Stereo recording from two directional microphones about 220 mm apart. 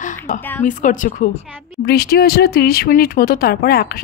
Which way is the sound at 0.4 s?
10° left (ahead or behind).